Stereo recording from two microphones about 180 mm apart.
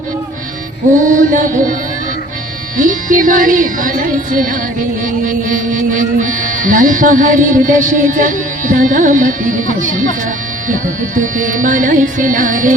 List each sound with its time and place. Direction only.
0.9 s speech: 45° right (ahead or behind)
2.7 s speech: 45° right (ahead or behind)